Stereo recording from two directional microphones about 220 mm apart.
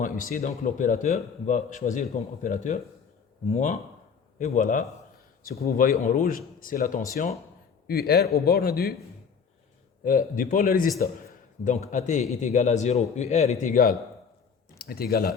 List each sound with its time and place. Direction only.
0.0 s a man's voice: 40° left (ahead or behind)
10.0 s a man's voice: 40° left (ahead or behind)